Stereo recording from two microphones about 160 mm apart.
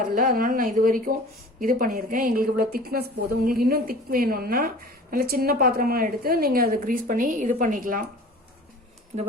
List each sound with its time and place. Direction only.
0.1 s a woman's voice: 60° right (ahead or behind)